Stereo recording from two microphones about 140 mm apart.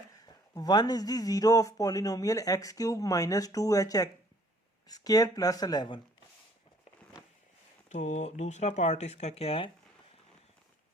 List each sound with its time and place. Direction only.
0.5 s speech: 30° left (ahead or behind)
7.9 s speech: 55° left (ahead or behind)